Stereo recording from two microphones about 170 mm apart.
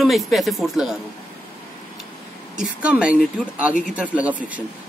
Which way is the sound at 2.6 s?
5° right (ahead or behind).